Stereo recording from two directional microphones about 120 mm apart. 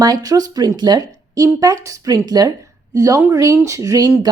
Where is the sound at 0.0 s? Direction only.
30° right (ahead or behind).